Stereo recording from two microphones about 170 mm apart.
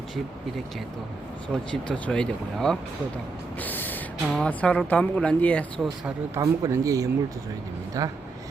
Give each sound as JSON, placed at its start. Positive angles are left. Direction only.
{"t": 1.7, "sound": "speech", "side_deg": 5}
{"t": 6.1, "sound": "speech", "side_deg": -15}